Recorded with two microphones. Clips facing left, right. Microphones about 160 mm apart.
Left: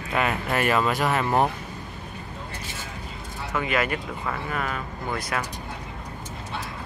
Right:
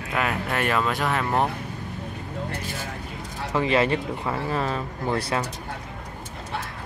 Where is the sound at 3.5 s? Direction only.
30° right (ahead or behind).